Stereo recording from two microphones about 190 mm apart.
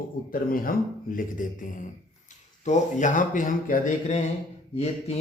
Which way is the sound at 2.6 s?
40° left (ahead or behind).